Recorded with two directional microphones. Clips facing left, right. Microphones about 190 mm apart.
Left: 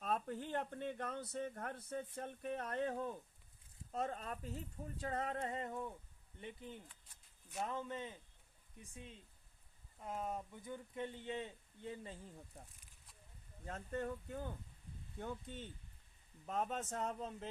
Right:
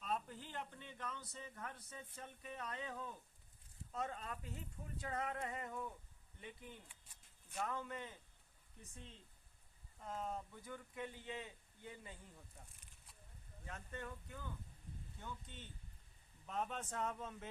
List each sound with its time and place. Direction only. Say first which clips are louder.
0.0 s speech: left 4 dB; 55° left (ahead or behind); by 12.1 s 30° left (ahead or behind)
13.7 s speech: left 8 dB; 45° left (ahead or behind)